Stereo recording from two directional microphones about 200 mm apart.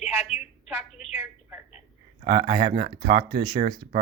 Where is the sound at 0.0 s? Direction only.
35° left (ahead or behind).